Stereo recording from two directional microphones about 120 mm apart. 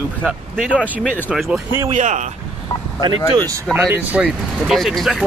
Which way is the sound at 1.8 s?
90° right.